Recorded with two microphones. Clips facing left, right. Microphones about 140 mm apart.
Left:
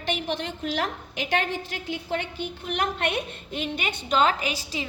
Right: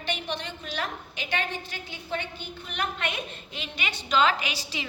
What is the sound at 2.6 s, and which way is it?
A woman's voice, 60° left (ahead or behind).